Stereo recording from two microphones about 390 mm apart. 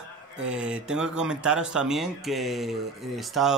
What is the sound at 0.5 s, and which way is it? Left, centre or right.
Speech, centre.